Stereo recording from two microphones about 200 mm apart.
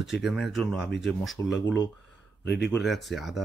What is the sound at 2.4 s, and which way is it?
Speech, 55° left (ahead or behind).